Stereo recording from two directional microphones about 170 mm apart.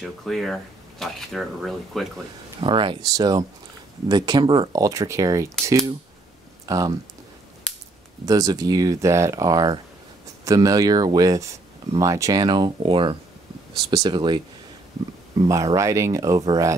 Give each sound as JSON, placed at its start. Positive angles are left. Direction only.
{"t": 0.0, "sound": "speech", "side_deg": 0}
{"t": 2.6, "sound": "speech", "side_deg": -30}
{"t": 8.3, "sound": "speech", "side_deg": -20}
{"t": 15.4, "sound": "speech", "side_deg": -20}